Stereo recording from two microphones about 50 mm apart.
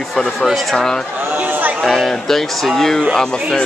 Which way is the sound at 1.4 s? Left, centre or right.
Right.